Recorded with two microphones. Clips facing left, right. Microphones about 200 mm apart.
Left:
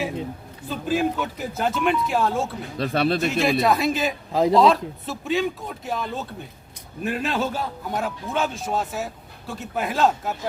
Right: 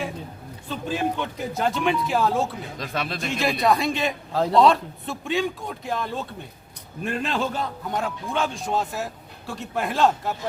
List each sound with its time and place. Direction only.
0.7 s a man's voice: 5° left (ahead or behind)
2.7 s speech: 35° left (ahead or behind)
3.2 s a man's voice: centre (ahead or behind)
4.3 s speech: 15° left (ahead or behind)
4.5 s a man's voice: centre (ahead or behind)